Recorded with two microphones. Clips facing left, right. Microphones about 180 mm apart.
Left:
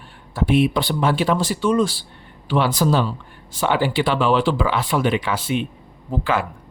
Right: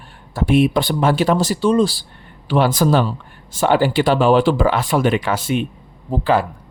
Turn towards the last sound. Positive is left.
turn(degrees=-35)  # may be behind; listen again after turning